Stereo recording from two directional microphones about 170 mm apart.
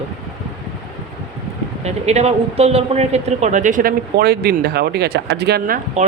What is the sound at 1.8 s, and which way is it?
A man's voice, 40° right (ahead or behind).